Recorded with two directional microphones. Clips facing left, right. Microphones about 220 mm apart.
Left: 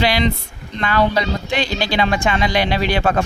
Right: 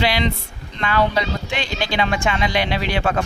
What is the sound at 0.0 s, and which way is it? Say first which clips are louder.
Speech: left 3 dB; 40° left (ahead or behind).